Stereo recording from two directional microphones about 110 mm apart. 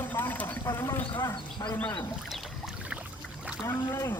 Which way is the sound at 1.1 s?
40° left (ahead or behind).